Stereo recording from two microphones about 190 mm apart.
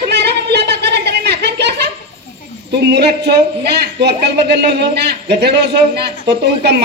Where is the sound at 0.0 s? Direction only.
60° right (ahead or behind).